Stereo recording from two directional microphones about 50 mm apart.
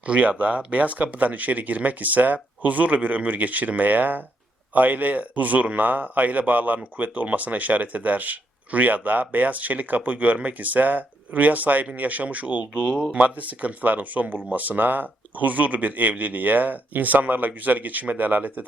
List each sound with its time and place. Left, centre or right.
0.0 s speech: right